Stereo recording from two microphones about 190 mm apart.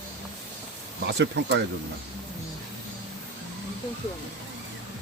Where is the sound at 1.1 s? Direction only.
70° right (ahead or behind).